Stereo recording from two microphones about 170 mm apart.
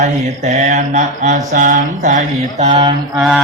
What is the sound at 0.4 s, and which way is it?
Mantra, 45° right (ahead or behind).